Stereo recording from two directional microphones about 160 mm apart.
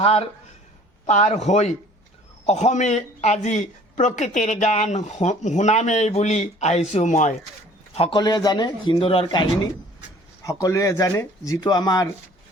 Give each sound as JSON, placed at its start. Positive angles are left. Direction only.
{"t": 0.0, "sound": "a man's voice", "side_deg": 40}
{"t": 7.9, "sound": "a man's voice", "side_deg": 35}
{"t": 8.2, "sound": "speech", "side_deg": 25}
{"t": 10.4, "sound": "speech", "side_deg": 20}